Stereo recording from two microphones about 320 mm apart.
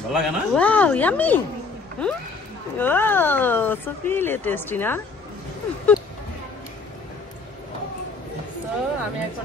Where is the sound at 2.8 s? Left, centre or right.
Centre.